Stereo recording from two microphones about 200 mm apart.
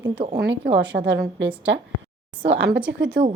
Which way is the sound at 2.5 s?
65° right (ahead or behind).